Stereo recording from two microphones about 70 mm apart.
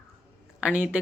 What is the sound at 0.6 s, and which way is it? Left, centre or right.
Speech, right.